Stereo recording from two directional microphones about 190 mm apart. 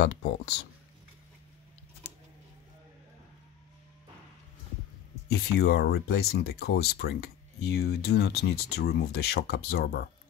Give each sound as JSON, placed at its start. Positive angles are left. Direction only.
{"t": 0.0, "sound": "speech", "side_deg": 70}
{"t": 5.3, "sound": "speech", "side_deg": 55}